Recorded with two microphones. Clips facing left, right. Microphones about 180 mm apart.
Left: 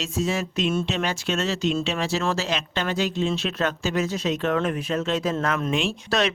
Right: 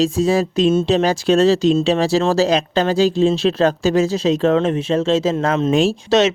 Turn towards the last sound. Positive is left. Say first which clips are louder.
# right 9 dB
turn(degrees=-25)  # may be behind; listen again after turning